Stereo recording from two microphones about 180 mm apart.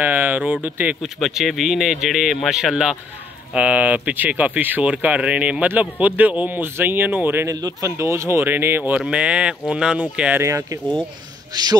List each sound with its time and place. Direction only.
0.0 s speech: 10° right (ahead or behind)